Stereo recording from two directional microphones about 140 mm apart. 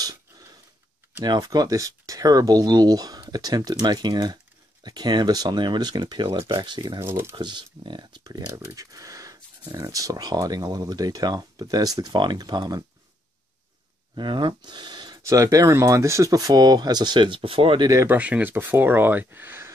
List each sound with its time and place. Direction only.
1.2 s speech: 30° right (ahead or behind)
7.0 s speech: 20° right (ahead or behind)
7.3 s speech: 35° right (ahead or behind)
14.1 s speech: 35° right (ahead or behind)
18.0 s speech: 10° right (ahead or behind)